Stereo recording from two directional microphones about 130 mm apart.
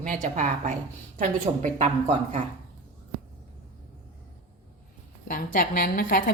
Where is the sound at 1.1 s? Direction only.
70° right (ahead or behind).